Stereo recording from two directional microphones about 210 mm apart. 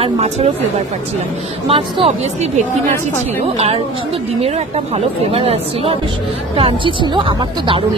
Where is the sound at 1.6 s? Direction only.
25° right (ahead or behind).